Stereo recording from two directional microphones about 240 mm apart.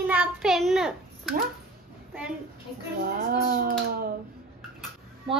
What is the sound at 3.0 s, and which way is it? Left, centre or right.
Speech, right.